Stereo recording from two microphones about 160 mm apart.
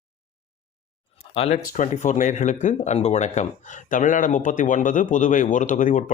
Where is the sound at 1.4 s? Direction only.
50° left (ahead or behind).